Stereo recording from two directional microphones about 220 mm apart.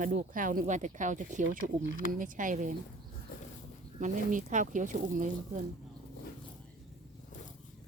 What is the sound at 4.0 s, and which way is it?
Speech, 35° right (ahead or behind).